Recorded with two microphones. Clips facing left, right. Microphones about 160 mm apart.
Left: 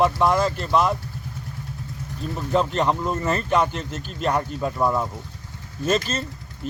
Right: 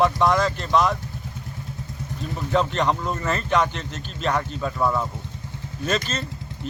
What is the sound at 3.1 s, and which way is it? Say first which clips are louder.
Speech: left 2 dB; 30° left (ahead or behind).